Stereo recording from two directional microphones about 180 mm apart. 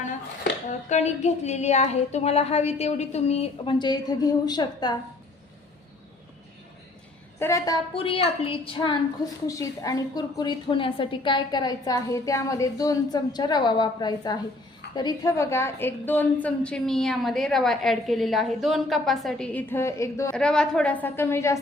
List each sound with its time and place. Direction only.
0.7 s a sound: 40° left (ahead or behind); by 4.9 s 25° left (ahead or behind)
7.3 s a woman's voice: 15° left (ahead or behind)
20.3 s a woman's voice: 5° left (ahead or behind)